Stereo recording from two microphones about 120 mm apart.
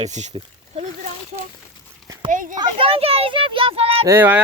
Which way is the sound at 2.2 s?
90° right.